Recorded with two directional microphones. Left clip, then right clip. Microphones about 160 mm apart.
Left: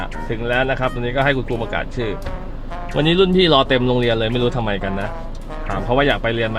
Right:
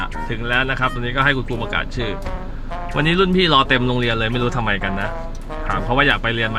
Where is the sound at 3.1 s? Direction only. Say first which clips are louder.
Left 2 dB; 10° right (ahead or behind).